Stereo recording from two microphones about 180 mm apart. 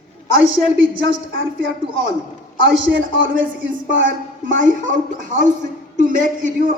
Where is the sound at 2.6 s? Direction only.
90° right.